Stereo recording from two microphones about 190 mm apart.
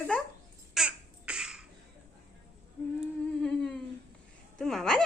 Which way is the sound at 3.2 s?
5° left (ahead or behind).